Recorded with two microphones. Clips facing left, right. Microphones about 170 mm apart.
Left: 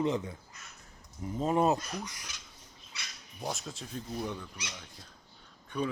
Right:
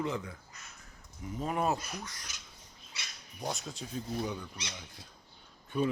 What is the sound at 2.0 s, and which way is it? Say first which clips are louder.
Speech: left 2 dB; 10° left (ahead or behind).